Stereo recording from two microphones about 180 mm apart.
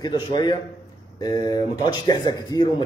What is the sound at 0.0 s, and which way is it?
A man's voice, 20° left (ahead or behind).